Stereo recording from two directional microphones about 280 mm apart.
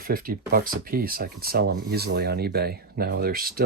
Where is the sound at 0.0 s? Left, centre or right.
Right.